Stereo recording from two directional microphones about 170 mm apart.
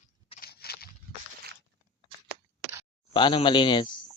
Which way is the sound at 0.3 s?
65° left (ahead or behind).